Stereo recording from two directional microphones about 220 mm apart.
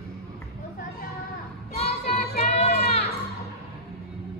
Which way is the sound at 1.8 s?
30° left (ahead or behind).